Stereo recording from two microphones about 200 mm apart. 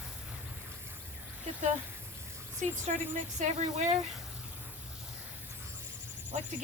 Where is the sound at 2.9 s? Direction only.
40° right (ahead or behind).